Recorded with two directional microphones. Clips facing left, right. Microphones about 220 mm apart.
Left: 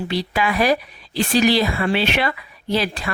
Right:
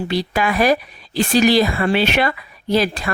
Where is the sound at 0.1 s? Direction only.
45° right (ahead or behind).